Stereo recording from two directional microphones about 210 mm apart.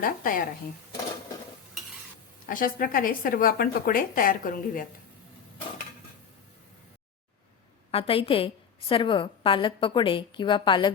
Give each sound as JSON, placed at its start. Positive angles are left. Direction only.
{"t": 0.0, "sound": "speech", "side_deg": 40}
{"t": 2.5, "sound": "speech", "side_deg": 40}
{"t": 7.9, "sound": "a woman's voice", "side_deg": 25}